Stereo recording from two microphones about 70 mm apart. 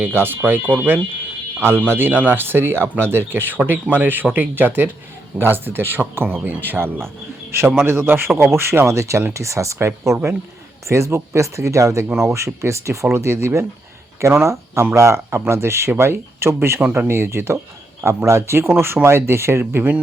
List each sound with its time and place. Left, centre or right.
0.0 s speech: right
1.6 s speech: right
16.8 s speech: right
17.1 s speech: right